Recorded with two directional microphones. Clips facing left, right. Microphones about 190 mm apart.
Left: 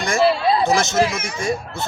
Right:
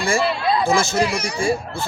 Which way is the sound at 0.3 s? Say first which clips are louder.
Left 2 dB; 35° left (ahead or behind).